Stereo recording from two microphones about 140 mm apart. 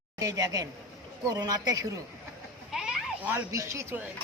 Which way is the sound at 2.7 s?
5° right (ahead or behind).